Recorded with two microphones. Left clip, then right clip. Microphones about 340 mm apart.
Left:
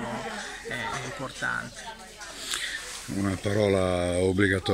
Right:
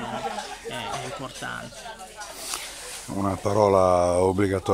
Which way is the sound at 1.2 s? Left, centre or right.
Centre.